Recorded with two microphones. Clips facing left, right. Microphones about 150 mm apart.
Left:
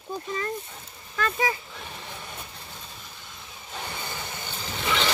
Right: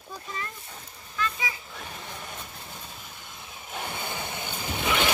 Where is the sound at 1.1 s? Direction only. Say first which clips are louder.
Left 6 dB; 50° left (ahead or behind).